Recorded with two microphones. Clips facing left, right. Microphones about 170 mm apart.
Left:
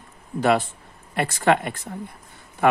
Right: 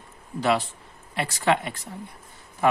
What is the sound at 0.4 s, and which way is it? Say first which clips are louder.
Speech: left 3 dB; 50° left (ahead or behind).